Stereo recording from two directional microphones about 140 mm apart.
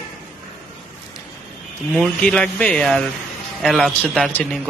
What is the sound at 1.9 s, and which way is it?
Speech, 5° left (ahead or behind).